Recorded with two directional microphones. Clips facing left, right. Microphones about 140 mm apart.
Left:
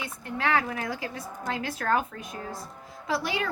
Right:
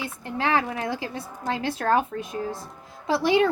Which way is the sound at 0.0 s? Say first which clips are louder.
Right 3 dB; 25° right (ahead or behind).